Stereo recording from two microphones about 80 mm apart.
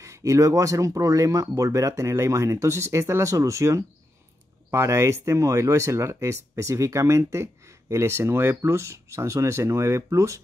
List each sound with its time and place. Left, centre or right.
0.0 s speech: right